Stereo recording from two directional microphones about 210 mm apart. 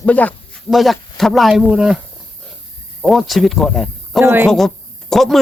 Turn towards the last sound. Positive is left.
turn(degrees=0)  # may be behind; listen again after turning